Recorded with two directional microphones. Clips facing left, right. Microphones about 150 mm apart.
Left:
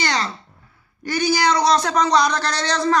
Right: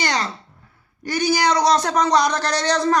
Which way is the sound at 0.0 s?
45° right (ahead or behind).